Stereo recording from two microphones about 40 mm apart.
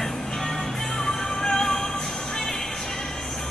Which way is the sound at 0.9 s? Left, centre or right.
Centre.